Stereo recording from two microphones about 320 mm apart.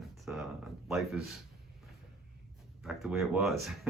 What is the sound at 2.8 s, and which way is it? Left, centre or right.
Speech, centre.